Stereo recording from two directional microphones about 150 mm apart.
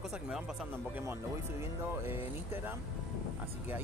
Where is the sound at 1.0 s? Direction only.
15° right (ahead or behind).